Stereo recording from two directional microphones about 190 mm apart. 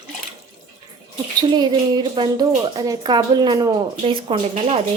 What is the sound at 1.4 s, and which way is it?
A woman's voice, 20° right (ahead or behind).